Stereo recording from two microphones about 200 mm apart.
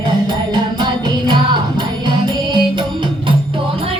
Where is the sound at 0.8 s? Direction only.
20° right (ahead or behind).